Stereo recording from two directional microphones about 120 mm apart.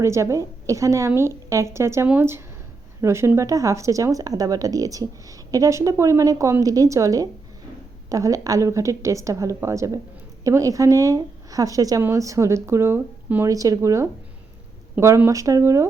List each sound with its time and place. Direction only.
0.0 s speech: 25° right (ahead or behind)